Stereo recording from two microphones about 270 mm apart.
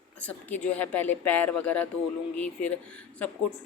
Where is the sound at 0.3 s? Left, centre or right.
Centre.